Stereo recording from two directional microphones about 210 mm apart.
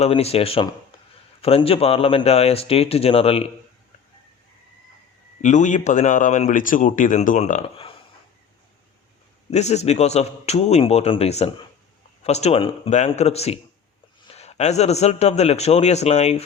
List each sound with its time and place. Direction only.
0.0 s speech: 30° left (ahead or behind)
5.4 s speech: 35° left (ahead or behind)
9.5 s speech: 30° left (ahead or behind)